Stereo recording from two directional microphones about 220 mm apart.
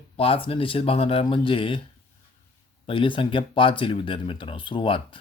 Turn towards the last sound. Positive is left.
turn(degrees=25)  # may be behind; listen again after turning